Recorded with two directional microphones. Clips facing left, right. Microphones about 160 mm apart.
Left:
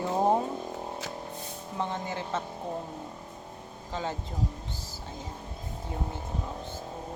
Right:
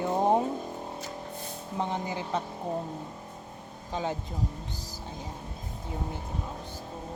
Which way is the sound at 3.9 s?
15° right (ahead or behind).